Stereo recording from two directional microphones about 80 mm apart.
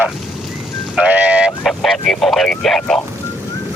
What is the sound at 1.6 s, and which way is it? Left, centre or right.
Speech, centre.